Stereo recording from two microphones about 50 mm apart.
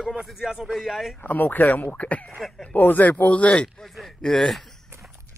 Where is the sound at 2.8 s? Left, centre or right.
Left.